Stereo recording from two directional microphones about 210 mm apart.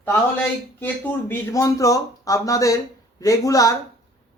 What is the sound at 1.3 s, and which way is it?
A man's voice, 15° left (ahead or behind).